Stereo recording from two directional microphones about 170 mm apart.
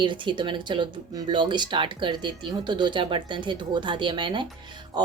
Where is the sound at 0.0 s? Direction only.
30° right (ahead or behind).